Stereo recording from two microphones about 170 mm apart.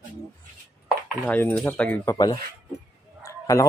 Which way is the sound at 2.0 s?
20° left (ahead or behind).